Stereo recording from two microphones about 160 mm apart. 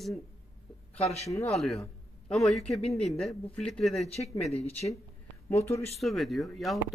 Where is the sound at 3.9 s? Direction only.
40° left (ahead or behind).